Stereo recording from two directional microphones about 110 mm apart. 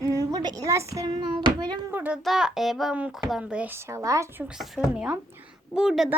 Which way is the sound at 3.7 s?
25° right (ahead or behind).